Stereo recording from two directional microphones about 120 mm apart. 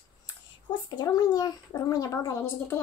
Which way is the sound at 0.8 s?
35° left (ahead or behind).